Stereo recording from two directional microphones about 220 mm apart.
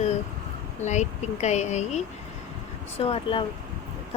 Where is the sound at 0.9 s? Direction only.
30° left (ahead or behind).